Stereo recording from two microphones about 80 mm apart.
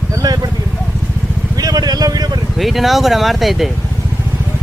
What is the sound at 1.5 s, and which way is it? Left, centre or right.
Speech, right.